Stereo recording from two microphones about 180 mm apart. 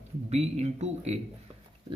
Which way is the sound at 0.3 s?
35° right (ahead or behind).